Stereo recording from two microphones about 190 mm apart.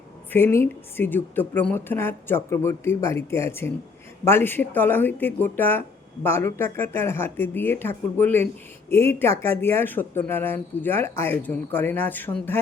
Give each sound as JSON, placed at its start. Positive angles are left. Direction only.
{"t": 0.3, "sound": "speech", "side_deg": 10}